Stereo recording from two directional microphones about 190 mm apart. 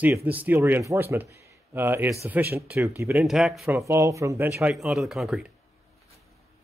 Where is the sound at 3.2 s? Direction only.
Centre (ahead or behind).